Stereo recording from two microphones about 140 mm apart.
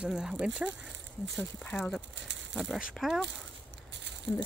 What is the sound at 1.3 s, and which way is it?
Speech, 5° left (ahead or behind).